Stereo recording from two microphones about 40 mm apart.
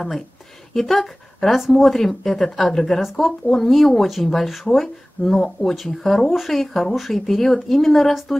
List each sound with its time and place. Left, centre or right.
0.7 s speech: centre
5.2 s speech: centre